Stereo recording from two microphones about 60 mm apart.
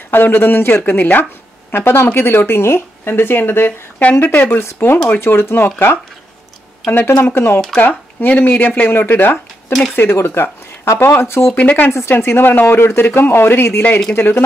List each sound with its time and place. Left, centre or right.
0.1 s speech: left
6.9 s speech: left
11.6 s speech: left
11.9 s speech: left